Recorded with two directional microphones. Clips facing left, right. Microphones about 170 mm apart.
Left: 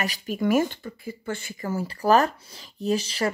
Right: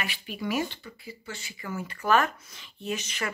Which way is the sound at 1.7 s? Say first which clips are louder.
Left 5 dB; 35° left (ahead or behind).